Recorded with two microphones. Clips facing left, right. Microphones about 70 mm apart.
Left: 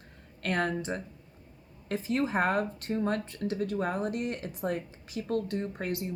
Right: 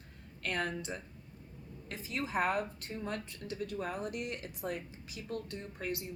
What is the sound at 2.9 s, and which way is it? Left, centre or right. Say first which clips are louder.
Speech: left 10 dB; left.